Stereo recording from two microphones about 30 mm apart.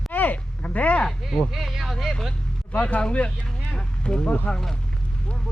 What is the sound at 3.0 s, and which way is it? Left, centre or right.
Speech, left.